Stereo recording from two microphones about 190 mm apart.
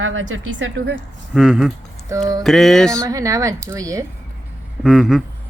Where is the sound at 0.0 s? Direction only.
90° right.